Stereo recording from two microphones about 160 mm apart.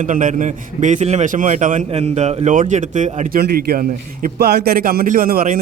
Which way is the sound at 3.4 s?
65° right (ahead or behind).